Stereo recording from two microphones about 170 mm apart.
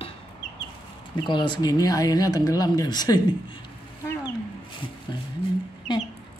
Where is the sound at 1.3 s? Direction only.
25° left (ahead or behind).